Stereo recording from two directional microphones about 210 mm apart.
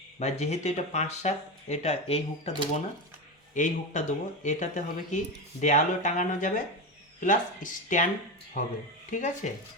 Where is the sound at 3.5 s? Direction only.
35° left (ahead or behind).